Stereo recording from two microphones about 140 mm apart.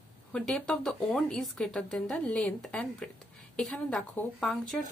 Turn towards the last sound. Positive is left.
turn(degrees=0)  # may be behind; listen again after turning